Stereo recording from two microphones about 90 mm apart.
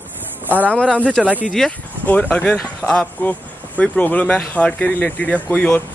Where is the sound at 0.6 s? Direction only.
15° left (ahead or behind).